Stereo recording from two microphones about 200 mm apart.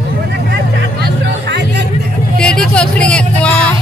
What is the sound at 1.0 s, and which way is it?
Music, 60° right (ahead or behind).